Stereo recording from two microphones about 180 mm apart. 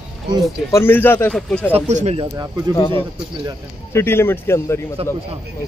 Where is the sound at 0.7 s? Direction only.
15° left (ahead or behind).